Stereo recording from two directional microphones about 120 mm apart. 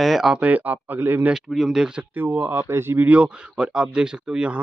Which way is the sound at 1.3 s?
5° right (ahead or behind).